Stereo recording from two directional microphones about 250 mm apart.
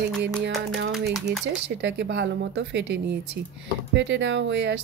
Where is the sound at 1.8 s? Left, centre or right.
Right.